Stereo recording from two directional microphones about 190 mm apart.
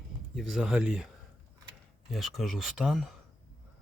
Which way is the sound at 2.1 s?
Centre (ahead or behind).